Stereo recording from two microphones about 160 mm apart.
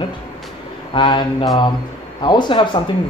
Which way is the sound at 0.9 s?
30° left (ahead or behind).